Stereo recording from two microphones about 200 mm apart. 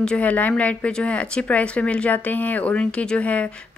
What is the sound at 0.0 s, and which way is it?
Speech, 5° left (ahead or behind).